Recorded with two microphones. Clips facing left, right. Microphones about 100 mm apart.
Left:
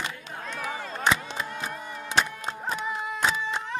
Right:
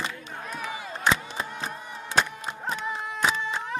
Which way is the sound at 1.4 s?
30° right (ahead or behind).